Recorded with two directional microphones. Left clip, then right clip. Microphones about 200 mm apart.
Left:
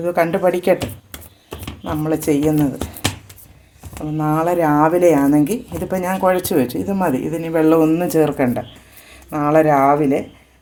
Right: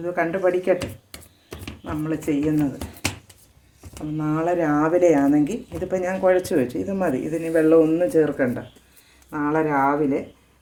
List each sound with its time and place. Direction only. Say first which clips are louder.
0.0 s speech: left 6 dB; 50° left (ahead or behind)
1.8 s a woman's voice: left 7 dB; 40° left (ahead or behind)
4.2 s a woman's voice: left 5 dB; 35° left (ahead or behind)